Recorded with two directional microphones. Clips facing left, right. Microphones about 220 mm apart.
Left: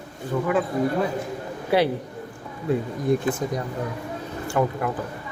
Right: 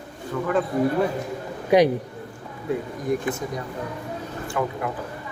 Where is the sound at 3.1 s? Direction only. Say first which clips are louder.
Left 3 dB; 30° left (ahead or behind).